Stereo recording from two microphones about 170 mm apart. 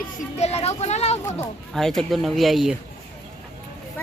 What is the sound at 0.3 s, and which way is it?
Vehicle, 40° left (ahead or behind).